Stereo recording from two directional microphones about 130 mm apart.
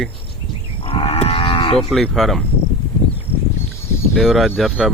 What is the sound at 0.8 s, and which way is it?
Cattle, 50° left (ahead or behind).